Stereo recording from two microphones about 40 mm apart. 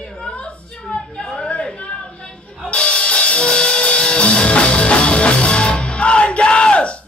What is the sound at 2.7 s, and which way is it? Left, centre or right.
Music, left.